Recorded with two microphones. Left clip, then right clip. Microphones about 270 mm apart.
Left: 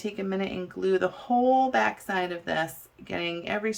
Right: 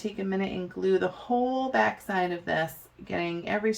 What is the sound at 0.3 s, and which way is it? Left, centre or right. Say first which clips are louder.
Speech: even; centre.